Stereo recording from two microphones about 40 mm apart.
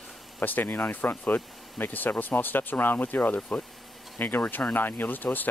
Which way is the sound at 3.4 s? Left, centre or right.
Left.